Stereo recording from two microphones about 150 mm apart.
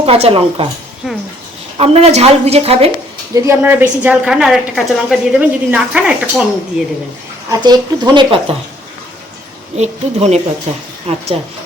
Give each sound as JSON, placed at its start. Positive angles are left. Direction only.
{"t": 0.0, "sound": "speech", "side_deg": -40}
{"t": 1.0, "sound": "a woman's voice", "side_deg": -5}
{"t": 1.8, "sound": "a woman's voice", "side_deg": -45}
{"t": 3.3, "sound": "a woman's voice", "side_deg": -15}
{"t": 7.5, "sound": "speech", "side_deg": -25}
{"t": 9.7, "sound": "a woman's voice", "side_deg": -50}